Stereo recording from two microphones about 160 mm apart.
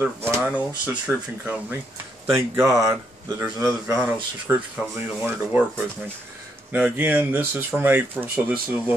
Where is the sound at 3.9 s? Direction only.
10° right (ahead or behind).